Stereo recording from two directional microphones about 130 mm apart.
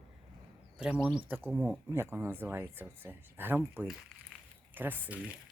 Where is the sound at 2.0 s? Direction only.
15° right (ahead or behind).